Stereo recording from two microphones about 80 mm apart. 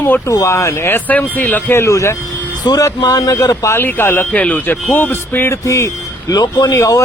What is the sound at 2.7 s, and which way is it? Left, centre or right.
Speech, left.